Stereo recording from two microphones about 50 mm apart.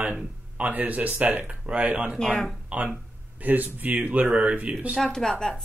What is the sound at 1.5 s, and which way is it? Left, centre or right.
Speech, right.